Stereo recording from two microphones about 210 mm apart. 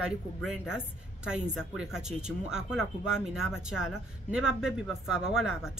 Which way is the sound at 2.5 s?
5° right (ahead or behind).